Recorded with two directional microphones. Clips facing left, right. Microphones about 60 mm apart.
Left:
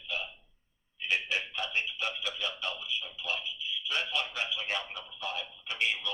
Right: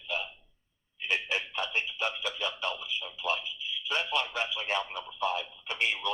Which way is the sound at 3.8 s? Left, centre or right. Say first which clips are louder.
Right 3 dB; right.